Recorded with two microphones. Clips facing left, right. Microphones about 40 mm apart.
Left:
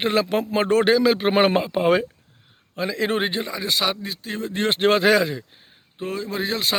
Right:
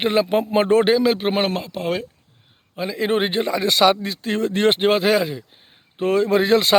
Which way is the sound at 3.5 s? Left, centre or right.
Right.